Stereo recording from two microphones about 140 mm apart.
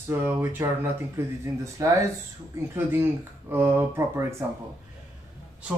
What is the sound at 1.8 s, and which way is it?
Speech, 25° right (ahead or behind).